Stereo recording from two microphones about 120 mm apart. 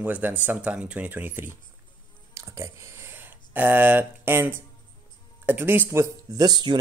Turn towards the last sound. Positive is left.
turn(degrees=-35)  # may be behind; listen again after turning